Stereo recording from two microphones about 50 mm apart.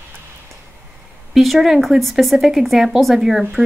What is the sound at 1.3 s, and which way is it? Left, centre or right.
A woman's voice, centre.